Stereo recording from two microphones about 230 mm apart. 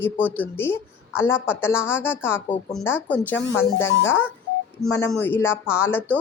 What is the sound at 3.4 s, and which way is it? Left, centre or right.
Speech, left.